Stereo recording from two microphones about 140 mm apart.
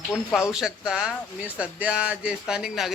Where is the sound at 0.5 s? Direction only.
5° right (ahead or behind).